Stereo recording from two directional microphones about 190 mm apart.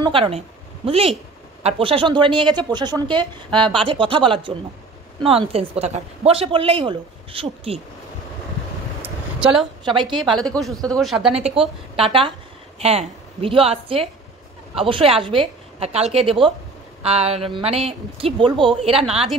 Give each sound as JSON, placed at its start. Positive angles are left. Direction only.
{"t": 0.0, "sound": "a woman's voice", "side_deg": -30}
{"t": 9.0, "sound": "a sound", "side_deg": -5}
{"t": 9.8, "sound": "a woman's voice", "side_deg": -25}
{"t": 10.1, "sound": "speech", "side_deg": 0}
{"t": 12.0, "sound": "a woman's voice", "side_deg": -25}